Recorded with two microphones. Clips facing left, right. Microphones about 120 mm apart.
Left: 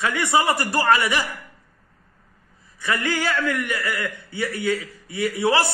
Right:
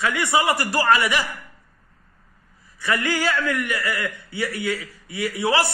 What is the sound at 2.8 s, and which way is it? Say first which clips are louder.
Speech: right 1 dB; 25° left (ahead or behind).